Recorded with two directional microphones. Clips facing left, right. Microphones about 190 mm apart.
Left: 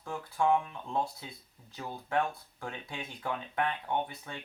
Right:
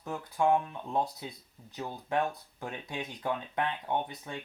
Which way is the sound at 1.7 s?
20° right (ahead or behind).